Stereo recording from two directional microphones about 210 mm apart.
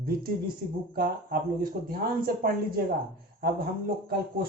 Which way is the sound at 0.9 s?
45° right (ahead or behind).